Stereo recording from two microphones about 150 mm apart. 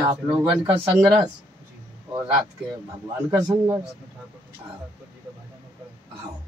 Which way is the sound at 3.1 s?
15° right (ahead or behind).